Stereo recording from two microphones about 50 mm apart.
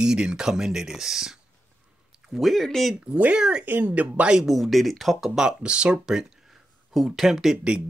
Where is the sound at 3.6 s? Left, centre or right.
Right.